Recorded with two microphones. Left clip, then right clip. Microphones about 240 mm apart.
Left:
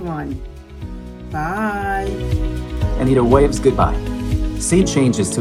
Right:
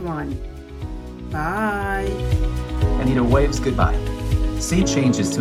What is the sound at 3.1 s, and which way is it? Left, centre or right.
Speech, left.